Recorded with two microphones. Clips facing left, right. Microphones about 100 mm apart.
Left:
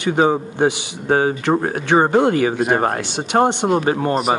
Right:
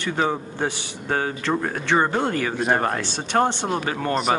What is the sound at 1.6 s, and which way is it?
Speech, 55° left (ahead or behind).